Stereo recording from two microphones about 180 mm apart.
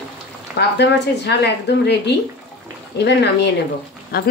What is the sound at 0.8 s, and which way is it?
Speech, 70° left (ahead or behind).